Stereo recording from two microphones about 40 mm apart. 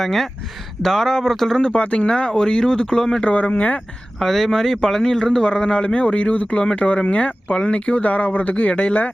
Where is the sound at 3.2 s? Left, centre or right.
Left.